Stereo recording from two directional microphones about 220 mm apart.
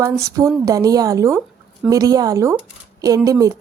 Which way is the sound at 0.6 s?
15° right (ahead or behind).